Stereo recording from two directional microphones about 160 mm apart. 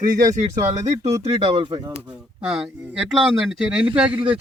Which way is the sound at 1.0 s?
40° right (ahead or behind).